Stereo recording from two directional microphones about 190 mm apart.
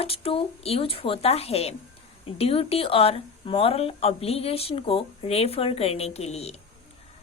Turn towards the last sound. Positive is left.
turn(degrees=35)  # may be behind; listen again after turning